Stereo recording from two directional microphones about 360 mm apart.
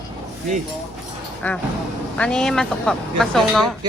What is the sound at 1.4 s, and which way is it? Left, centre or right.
Speech, centre.